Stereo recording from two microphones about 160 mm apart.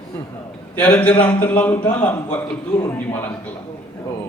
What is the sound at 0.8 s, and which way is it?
A man's voice, 10° left (ahead or behind).